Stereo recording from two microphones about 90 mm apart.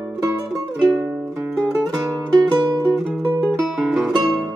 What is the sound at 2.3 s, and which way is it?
Music, 45° right (ahead or behind).